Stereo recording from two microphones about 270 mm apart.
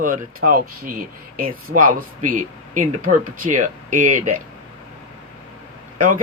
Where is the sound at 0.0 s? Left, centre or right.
Right.